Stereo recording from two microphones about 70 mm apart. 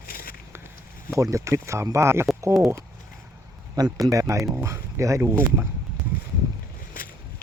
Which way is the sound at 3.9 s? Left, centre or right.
Right.